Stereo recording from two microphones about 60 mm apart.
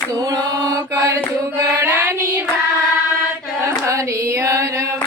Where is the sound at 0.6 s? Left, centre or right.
Right.